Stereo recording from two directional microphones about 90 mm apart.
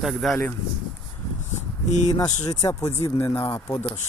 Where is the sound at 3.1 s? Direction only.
20° left (ahead or behind).